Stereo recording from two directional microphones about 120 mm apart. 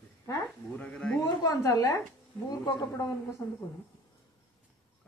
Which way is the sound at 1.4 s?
30° left (ahead or behind).